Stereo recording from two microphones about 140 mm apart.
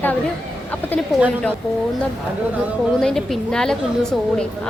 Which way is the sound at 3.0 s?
5° left (ahead or behind).